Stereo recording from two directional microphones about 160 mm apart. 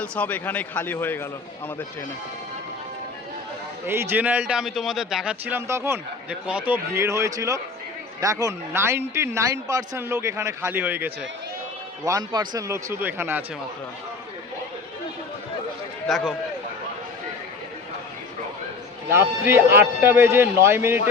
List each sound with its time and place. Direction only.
0.0 s a man's voice: 10° left (ahead or behind)
3.8 s a man's voice: 15° right (ahead or behind)
12.0 s a man's voice: 25° right (ahead or behind)
16.0 s a man's voice: centre (ahead or behind)
19.1 s a man's voice: 15° right (ahead or behind)